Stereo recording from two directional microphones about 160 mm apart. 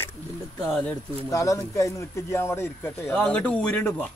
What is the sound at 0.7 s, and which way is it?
Speech, 5° left (ahead or behind).